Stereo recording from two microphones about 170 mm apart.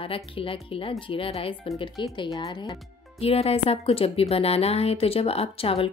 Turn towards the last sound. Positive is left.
turn(degrees=35)  # may be behind; listen again after turning